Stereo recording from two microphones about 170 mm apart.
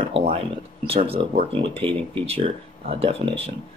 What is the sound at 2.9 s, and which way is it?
Speech, 35° right (ahead or behind).